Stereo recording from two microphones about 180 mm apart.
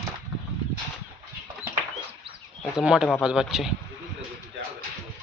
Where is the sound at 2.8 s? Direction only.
5° right (ahead or behind).